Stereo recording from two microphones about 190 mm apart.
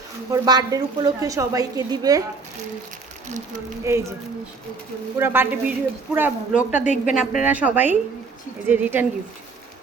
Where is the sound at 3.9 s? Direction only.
15° right (ahead or behind).